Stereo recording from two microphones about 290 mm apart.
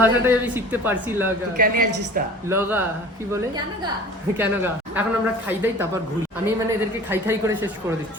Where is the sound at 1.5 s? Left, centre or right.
Right.